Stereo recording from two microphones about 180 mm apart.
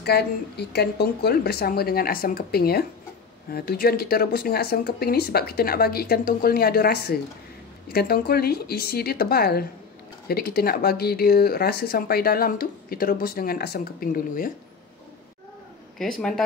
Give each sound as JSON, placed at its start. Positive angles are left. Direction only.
{"t": 0.0, "sound": "speech", "side_deg": 65}
{"t": 16.0, "sound": "a man's voice", "side_deg": 5}